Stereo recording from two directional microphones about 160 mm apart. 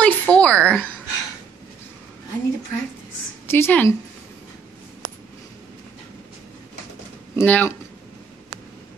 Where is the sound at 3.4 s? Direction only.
15° left (ahead or behind).